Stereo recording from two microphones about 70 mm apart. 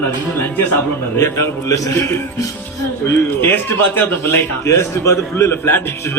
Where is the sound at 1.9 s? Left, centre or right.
Left.